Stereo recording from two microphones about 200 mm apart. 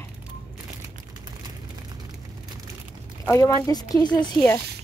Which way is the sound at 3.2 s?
15° left (ahead or behind).